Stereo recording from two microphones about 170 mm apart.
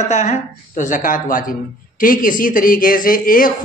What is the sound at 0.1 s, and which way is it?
A woman's voice, 45° left (ahead or behind).